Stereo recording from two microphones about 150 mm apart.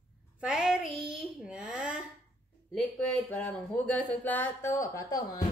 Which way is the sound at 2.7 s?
5° left (ahead or behind).